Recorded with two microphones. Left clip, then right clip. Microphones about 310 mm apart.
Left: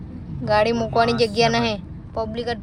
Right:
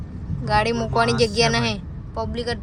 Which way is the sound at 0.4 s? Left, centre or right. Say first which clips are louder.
Left 2 dB; centre.